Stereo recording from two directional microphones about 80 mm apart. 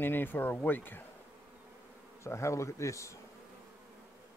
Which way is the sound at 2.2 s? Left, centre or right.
Left.